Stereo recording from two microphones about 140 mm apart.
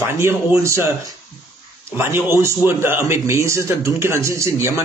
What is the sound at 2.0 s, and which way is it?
Speech, 15° right (ahead or behind).